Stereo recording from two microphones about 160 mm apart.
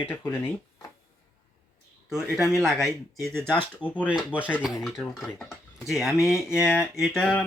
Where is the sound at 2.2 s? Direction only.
15° right (ahead or behind).